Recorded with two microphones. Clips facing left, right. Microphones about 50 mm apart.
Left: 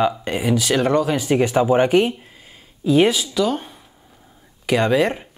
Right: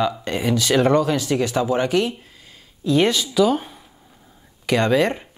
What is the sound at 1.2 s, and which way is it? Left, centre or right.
Speech, left.